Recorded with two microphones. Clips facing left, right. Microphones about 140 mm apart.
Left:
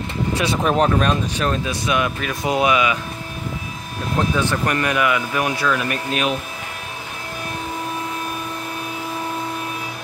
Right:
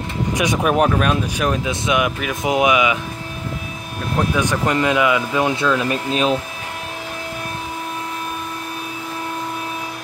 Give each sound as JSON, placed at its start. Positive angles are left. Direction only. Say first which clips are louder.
{"t": 0.3, "sound": "speech", "louder": "right 2 dB", "side_deg": -15}
{"t": 1.4, "sound": "speech", "louder": "right 1 dB", "side_deg": -15}
{"t": 4.2, "sound": "speech", "louder": "right 1 dB", "side_deg": -15}